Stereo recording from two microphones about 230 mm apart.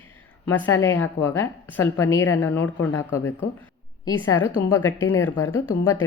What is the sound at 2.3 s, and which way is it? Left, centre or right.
A woman's voice, centre.